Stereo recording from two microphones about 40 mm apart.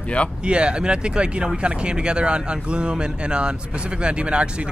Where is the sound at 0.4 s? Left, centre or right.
Right.